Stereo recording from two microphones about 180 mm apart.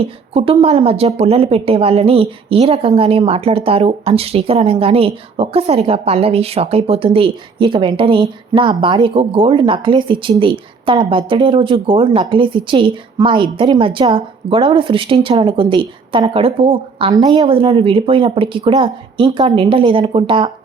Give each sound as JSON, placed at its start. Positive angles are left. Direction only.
{"t": 0.0, "sound": "a woman's voice", "side_deg": -30}